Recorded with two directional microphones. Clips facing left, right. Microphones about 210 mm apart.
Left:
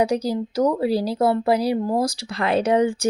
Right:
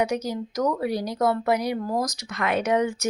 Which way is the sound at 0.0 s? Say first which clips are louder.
Left 4 dB; 35° left (ahead or behind).